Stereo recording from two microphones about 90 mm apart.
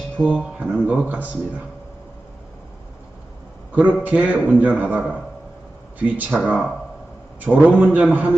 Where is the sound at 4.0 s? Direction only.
15° right (ahead or behind).